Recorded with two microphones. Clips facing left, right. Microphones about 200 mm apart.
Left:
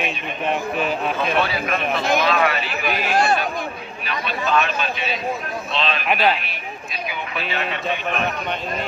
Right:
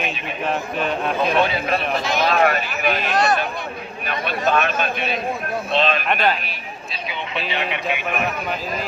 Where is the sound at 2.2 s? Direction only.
45° right (ahead or behind).